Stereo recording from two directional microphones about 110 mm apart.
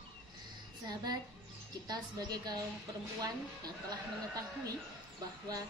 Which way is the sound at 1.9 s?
35° right (ahead or behind).